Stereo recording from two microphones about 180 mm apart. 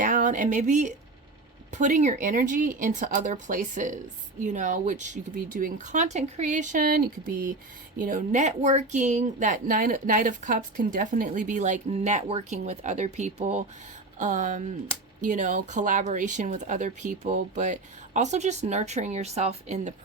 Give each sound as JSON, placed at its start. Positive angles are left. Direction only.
{"t": 0.0, "sound": "speech", "side_deg": -45}